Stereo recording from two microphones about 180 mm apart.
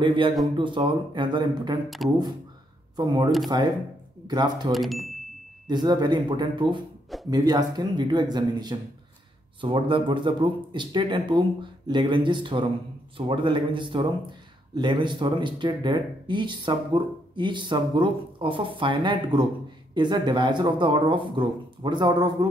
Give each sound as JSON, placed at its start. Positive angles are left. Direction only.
{"t": 0.0, "sound": "speech", "side_deg": -25}
{"t": 2.0, "sound": "speech", "side_deg": 0}
{"t": 3.0, "sound": "speech", "side_deg": -20}
{"t": 4.7, "sound": "speech", "side_deg": 0}
{"t": 5.7, "sound": "speech", "side_deg": -25}